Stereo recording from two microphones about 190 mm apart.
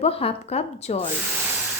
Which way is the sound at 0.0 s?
30° left (ahead or behind).